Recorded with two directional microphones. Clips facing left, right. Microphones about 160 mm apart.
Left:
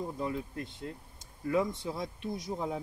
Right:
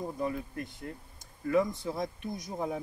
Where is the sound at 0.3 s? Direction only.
25° left (ahead or behind).